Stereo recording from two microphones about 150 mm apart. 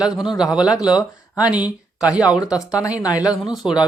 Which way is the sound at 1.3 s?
10° right (ahead or behind).